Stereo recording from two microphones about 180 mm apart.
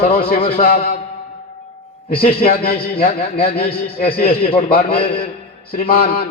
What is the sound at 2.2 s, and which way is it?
Speech, 55° left (ahead or behind).